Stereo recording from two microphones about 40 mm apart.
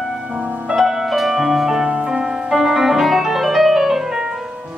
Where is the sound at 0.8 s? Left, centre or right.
Centre.